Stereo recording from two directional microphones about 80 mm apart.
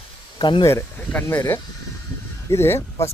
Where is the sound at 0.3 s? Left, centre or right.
Left.